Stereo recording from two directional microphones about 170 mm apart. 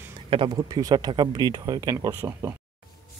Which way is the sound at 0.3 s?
30° right (ahead or behind).